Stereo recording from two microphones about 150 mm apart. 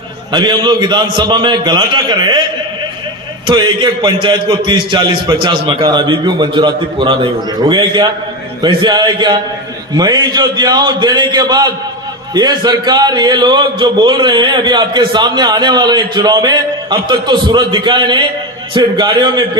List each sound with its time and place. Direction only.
0.3 s a man's voice: 30° right (ahead or behind)
3.4 s a man's voice: 30° right (ahead or behind)